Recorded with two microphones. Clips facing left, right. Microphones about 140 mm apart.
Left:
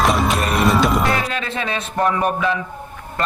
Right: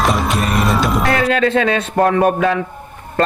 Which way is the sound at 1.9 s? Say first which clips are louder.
Right 4 dB; 55° right (ahead or behind).